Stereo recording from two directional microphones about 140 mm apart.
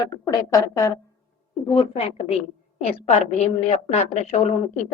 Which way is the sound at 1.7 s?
40° left (ahead or behind).